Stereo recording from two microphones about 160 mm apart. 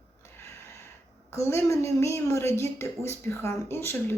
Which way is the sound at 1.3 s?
15° left (ahead or behind).